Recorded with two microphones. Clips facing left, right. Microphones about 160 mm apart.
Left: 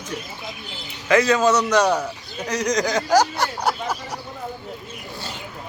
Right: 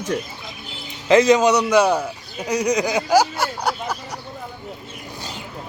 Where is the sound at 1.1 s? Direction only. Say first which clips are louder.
Right 3 dB; 20° right (ahead or behind); by 4.0 s centre (ahead or behind).